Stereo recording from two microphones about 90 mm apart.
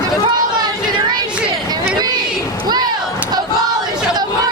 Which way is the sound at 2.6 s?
50° right (ahead or behind).